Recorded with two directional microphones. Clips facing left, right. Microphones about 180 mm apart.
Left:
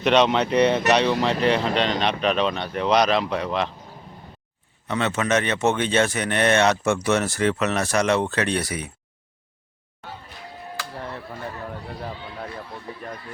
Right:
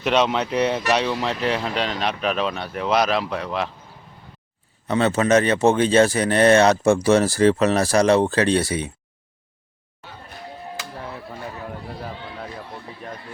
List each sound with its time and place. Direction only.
0.0 s speech: 5° right (ahead or behind)
4.9 s speech: 35° right (ahead or behind)